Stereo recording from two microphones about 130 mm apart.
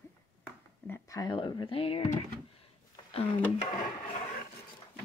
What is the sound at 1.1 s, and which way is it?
Speech, 30° left (ahead or behind).